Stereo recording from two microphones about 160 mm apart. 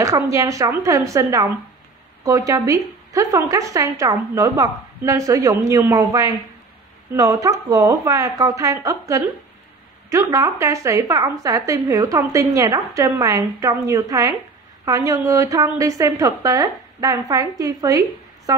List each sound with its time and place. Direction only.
0.0 s a woman's voice: 20° right (ahead or behind)